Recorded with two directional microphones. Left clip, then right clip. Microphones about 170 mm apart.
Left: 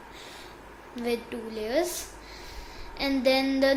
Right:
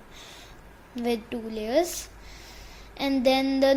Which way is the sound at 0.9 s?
45° right (ahead or behind).